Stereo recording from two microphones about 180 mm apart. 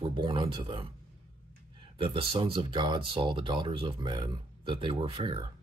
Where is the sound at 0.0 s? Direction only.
30° right (ahead or behind).